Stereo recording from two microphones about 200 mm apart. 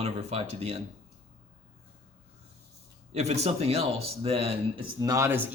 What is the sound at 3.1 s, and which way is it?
Speech, 35° right (ahead or behind).